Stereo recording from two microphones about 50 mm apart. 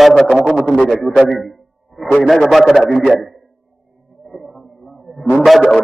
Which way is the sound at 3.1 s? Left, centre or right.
Centre.